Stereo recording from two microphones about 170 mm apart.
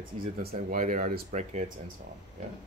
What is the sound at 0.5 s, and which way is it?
Speech, 50° right (ahead or behind).